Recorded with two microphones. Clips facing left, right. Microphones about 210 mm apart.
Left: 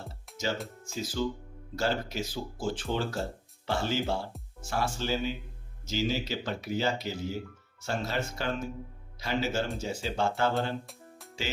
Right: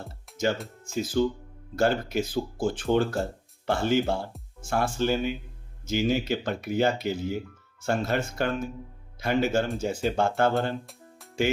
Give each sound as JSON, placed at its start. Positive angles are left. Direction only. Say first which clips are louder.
{"t": 0.3, "sound": "music", "louder": "right 4 dB", "side_deg": 0}
{"t": 0.9, "sound": "speech", "louder": "right 7 dB", "side_deg": -55}